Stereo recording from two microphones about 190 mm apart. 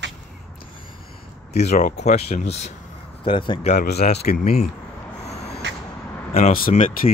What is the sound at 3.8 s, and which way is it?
Speech, 60° left (ahead or behind).